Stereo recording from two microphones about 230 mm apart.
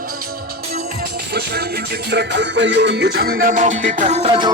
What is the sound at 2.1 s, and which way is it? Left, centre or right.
Music, right.